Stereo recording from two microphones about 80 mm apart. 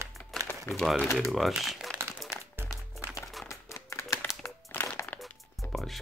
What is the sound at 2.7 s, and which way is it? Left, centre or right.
Music, left.